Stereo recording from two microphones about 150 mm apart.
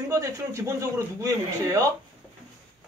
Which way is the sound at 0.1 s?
20° right (ahead or behind).